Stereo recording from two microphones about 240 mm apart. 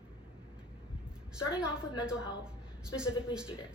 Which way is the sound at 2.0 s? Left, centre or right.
Centre.